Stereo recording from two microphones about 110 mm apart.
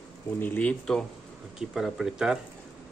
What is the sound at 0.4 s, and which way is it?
Speech, 15° left (ahead or behind).